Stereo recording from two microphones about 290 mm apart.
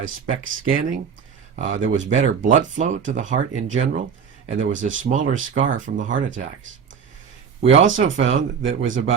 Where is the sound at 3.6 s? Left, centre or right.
Right.